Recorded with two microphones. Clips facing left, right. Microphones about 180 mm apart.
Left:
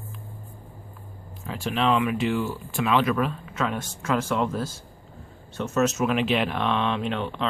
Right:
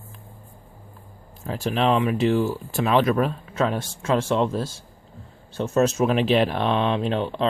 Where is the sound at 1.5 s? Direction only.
40° right (ahead or behind).